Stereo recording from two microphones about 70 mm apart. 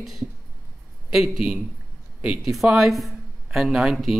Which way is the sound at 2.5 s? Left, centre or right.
Centre.